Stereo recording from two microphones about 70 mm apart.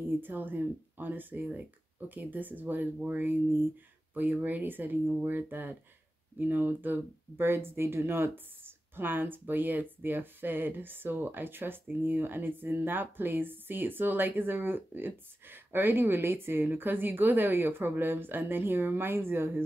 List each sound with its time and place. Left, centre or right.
0.0 s speech: right